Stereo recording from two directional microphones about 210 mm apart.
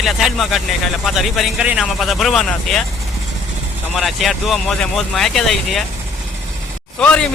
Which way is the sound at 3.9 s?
Centre (ahead or behind).